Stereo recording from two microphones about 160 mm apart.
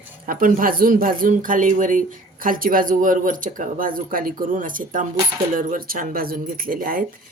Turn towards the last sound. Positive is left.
turn(degrees=-60)  # may be behind; listen again after turning